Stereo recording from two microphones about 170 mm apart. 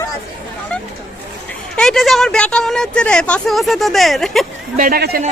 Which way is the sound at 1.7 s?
Centre (ahead or behind).